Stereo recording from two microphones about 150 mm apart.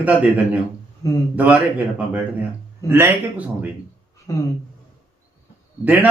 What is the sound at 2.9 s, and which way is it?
Speech, 15° right (ahead or behind).